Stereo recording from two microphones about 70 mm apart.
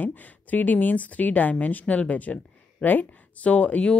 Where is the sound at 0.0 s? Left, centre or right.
Left.